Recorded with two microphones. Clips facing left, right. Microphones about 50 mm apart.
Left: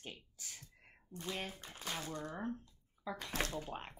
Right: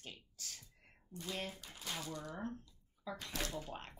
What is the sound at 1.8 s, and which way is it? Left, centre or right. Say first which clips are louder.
Speech: left 3 dB; left.